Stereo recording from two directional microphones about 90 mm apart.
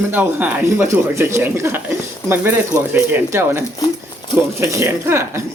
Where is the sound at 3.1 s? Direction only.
25° right (ahead or behind).